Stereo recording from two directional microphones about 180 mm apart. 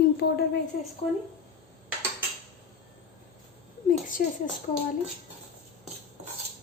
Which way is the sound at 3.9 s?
50° left (ahead or behind).